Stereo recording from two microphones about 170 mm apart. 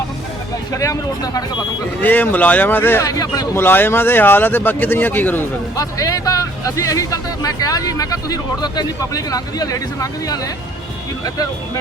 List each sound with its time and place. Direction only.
0.7 s a man's voice: 20° left (ahead or behind)
2.0 s a man's voice: 10° left (ahead or behind)